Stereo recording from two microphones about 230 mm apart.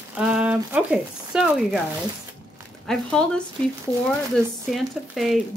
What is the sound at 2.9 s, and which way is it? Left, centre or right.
Speech, centre.